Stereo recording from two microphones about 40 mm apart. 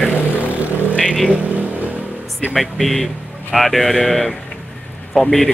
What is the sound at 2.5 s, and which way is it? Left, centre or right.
Speech, centre.